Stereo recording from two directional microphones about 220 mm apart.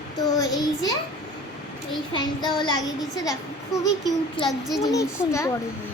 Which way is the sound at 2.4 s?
20° left (ahead or behind).